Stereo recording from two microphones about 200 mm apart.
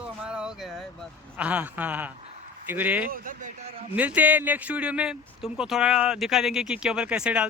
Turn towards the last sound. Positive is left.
turn(degrees=-5)  # may be behind; listen again after turning